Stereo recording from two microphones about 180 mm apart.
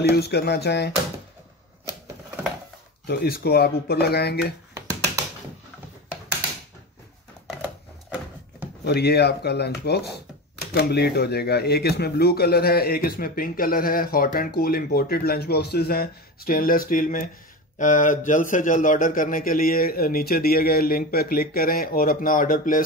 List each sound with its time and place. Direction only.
0.1 s speech: 65° left (ahead or behind)
3.1 s speech: 60° left (ahead or behind)
8.8 s a man's voice: 65° left (ahead or behind)